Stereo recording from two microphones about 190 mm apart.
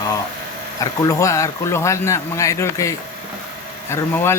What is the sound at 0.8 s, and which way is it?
A man's voice, 15° left (ahead or behind).